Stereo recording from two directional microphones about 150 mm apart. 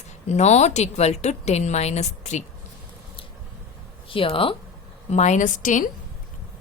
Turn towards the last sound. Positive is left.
turn(degrees=60)  # may be behind; listen again after turning